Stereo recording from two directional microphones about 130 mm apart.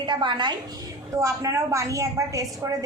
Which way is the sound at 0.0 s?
35° right (ahead or behind).